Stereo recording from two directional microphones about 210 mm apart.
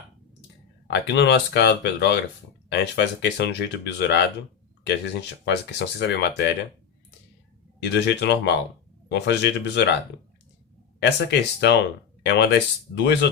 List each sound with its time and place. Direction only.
0.9 s speech: 55° left (ahead or behind)
5.5 s speech: 55° left (ahead or behind)
7.8 s speech: 55° left (ahead or behind)
11.0 s speech: 55° left (ahead or behind)